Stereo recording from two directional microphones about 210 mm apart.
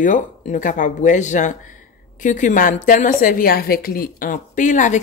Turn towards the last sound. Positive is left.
turn(degrees=35)  # may be behind; listen again after turning